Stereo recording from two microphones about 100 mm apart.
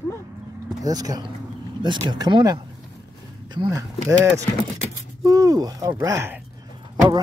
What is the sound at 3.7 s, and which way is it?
Speech, 35° right (ahead or behind).